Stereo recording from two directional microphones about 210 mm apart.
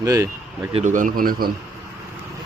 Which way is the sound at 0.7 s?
35° right (ahead or behind).